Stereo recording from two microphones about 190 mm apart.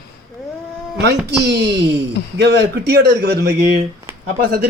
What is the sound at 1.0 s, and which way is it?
A man's voice, 60° right (ahead or behind).